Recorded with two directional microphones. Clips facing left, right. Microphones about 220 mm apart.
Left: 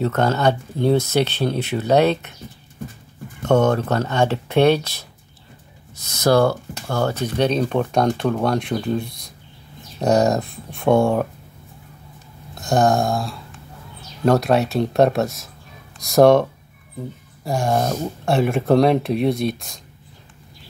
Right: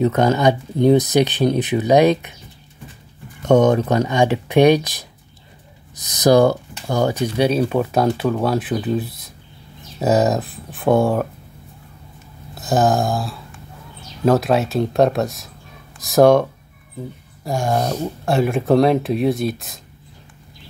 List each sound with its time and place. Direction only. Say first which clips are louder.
0.0 s speech: right 3 dB; 15° right (ahead or behind)
3.4 s speech: right 3 dB; 15° right (ahead or behind)
12.5 s speech: even; 5° right (ahead or behind)
17.5 s speech: even; centre (ahead or behind)